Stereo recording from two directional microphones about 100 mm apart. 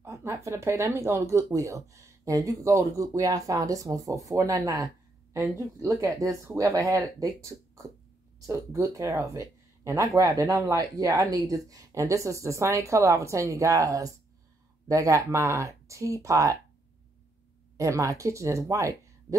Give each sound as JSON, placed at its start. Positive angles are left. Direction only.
{"t": 0.0, "sound": "speech", "side_deg": -30}
{"t": 17.7, "sound": "speech", "side_deg": -30}